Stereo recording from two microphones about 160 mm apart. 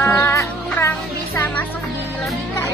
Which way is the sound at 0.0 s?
15° left (ahead or behind).